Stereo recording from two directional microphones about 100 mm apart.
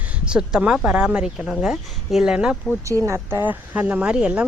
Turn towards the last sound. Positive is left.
turn(degrees=-10)  # may be behind; listen again after turning